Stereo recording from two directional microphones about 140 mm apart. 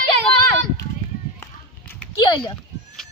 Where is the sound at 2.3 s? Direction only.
30° left (ahead or behind).